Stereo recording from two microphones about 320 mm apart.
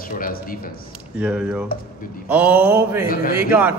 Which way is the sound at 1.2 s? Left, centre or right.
Centre.